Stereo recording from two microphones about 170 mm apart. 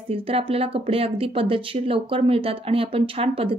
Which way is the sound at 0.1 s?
35° right (ahead or behind).